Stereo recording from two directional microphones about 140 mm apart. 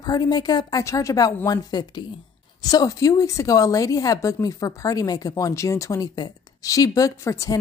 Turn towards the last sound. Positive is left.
turn(degrees=20)  # may be behind; listen again after turning